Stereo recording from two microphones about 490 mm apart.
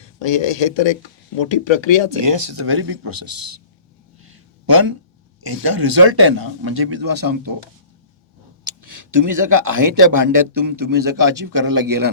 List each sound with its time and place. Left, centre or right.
0.2 s speech: left
2.6 s speech: right
3.1 s a man's voice: right
4.6 s a man's voice: right
8.6 s speech: right